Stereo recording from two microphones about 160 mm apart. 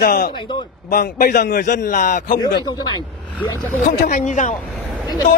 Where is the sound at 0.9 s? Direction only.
55° left (ahead or behind).